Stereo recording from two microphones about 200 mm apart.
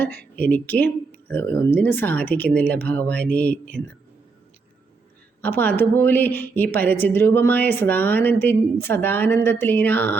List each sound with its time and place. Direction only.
0.0 s a woman's voice: 10° left (ahead or behind)
5.4 s a woman's voice: 10° left (ahead or behind)